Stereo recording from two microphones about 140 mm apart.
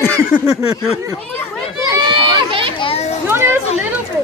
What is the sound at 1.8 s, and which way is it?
Run, 30° right (ahead or behind).